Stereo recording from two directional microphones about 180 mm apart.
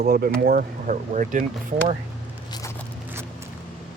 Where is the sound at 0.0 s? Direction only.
55° right (ahead or behind).